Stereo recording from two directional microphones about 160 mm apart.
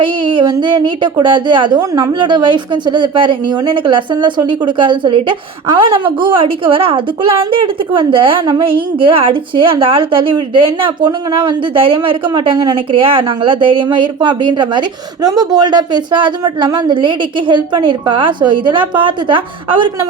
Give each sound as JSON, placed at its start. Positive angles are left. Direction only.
{"t": 0.0, "sound": "a woman's voice", "side_deg": -30}